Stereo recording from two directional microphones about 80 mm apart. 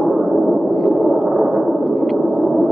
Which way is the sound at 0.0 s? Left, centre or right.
Centre.